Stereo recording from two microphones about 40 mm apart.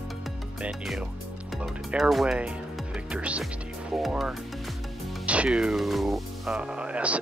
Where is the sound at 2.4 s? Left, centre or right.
Right.